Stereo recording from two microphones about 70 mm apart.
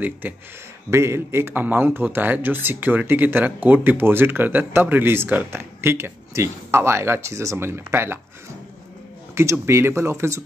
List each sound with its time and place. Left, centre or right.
0.2 s speech: right
0.8 s speech: right
9.3 s speech: right